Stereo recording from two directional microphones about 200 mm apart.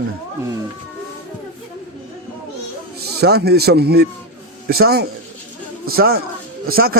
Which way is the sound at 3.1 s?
55° right (ahead or behind).